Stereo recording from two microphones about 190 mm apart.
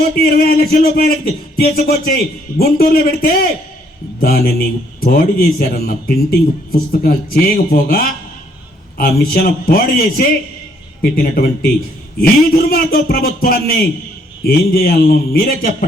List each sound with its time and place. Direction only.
0.2 s a man's voice: 50° left (ahead or behind)